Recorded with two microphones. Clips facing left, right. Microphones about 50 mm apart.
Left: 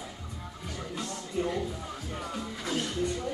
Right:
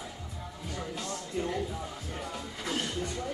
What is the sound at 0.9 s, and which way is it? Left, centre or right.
Music, centre.